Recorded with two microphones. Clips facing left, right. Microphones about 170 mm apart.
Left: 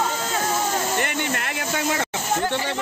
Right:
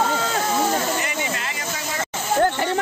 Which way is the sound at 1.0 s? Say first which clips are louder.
Left 1 dB; 60° left (ahead or behind).